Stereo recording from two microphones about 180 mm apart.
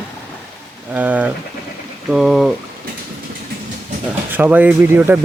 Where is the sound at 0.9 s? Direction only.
10° right (ahead or behind).